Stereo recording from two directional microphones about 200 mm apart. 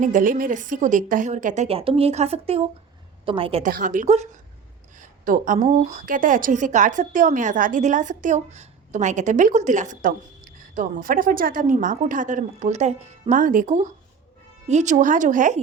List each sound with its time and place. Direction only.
0.0 s a woman's voice: 40° right (ahead or behind)
3.6 s a woman's voice: 40° right (ahead or behind)